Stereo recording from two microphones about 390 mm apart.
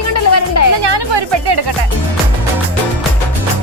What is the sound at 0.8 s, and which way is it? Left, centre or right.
Music, right.